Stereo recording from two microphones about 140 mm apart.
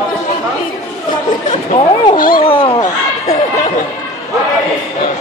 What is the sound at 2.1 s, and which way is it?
Speech, 90° left.